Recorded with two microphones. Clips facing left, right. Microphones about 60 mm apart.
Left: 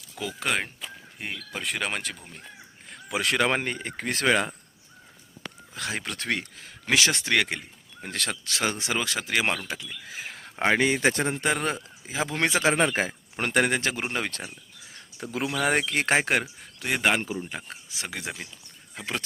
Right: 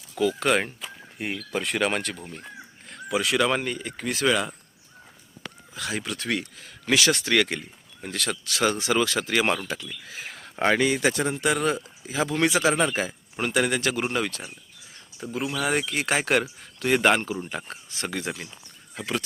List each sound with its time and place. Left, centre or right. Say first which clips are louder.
0.2 s speech: right 7 dB; centre
0.5 s speech: right 5 dB; centre
3.2 s speech: right 1 dB; left
5.7 s speech: right 2 dB; left
8.0 s speech: right 2 dB; left; by 9.6 s centre
10.1 s a sound: even; left
10.8 s speech: even; left
15.2 s speech: even; left
15.6 s speech: left 2 dB; left
16.1 s speech: right 1 dB; left
16.4 s speech: right 6 dB; centre